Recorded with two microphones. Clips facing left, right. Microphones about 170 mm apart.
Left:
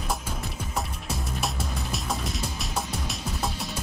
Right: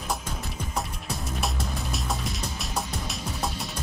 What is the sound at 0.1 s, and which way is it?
Music, centre (ahead or behind).